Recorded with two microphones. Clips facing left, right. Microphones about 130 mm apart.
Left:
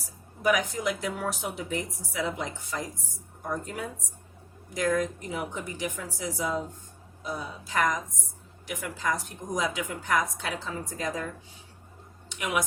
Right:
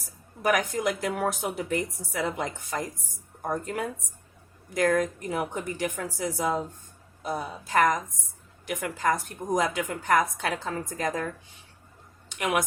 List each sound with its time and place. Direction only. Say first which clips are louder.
0.4 s a woman's voice: right 1 dB; 50° right (ahead or behind)
4.7 s a woman's voice: right 3 dB; 55° right (ahead or behind)
12.4 s a woman's voice: right 3 dB; 55° right (ahead or behind)